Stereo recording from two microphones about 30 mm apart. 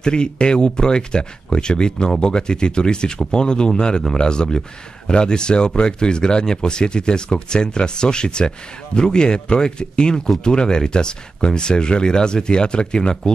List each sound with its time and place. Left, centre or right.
0.0 s speech: left